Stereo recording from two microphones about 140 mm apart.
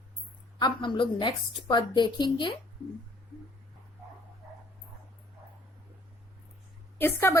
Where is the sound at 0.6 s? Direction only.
35° left (ahead or behind).